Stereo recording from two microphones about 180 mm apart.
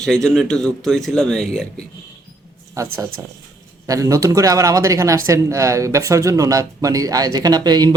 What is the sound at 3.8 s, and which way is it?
Speech, 20° right (ahead or behind).